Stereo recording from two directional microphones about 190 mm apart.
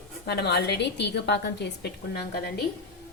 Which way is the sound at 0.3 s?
60° left (ahead or behind).